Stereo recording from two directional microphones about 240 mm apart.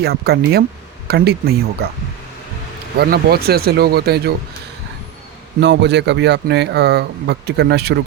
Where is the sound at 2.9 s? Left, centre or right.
Right.